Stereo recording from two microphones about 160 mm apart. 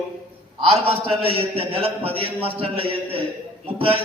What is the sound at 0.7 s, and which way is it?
A man's voice, 35° right (ahead or behind).